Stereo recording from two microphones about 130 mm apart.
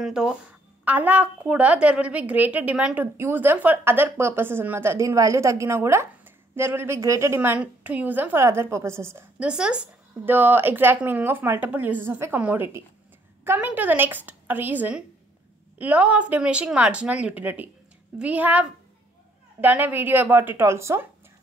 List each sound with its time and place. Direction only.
0.0 s a woman's voice: 5° right (ahead or behind)
9.5 s a woman's voice: 5° right (ahead or behind)